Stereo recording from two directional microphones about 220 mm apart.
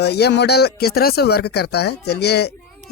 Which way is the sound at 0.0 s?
50° left (ahead or behind).